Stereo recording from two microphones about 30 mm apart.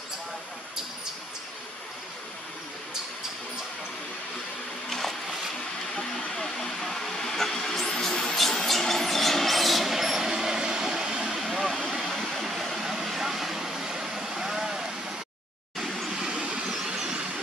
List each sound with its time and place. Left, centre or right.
4.8 s a sound: centre
6.3 s vehicle: centre
8.1 s a sound: left
8.6 s train: centre
10.6 s vehicle: right
11.3 s vehicle: centre
12.1 s vehicle: centre
12.4 s vehicle: centre
15.8 s vehicle: centre
16.1 s vehicle: right
16.3 s vehicle: right